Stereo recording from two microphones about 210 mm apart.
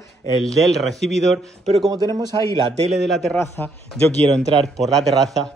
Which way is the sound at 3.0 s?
Centre (ahead or behind).